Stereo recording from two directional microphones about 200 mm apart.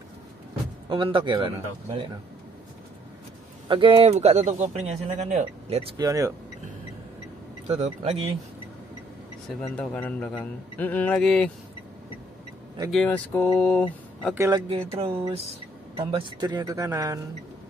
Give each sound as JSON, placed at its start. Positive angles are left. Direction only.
{"t": 0.8, "sound": "speech", "side_deg": -25}
{"t": 3.6, "sound": "speech", "side_deg": -25}
{"t": 5.9, "sound": "speech", "side_deg": -15}
{"t": 7.6, "sound": "speech", "side_deg": -35}
{"t": 9.6, "sound": "a man's voice", "side_deg": 5}
{"t": 12.9, "sound": "a man's voice", "side_deg": 5}
{"t": 13.6, "sound": "mantra", "side_deg": 5}
{"t": 14.3, "sound": "speech", "side_deg": -15}
{"t": 14.7, "sound": "speech", "side_deg": -30}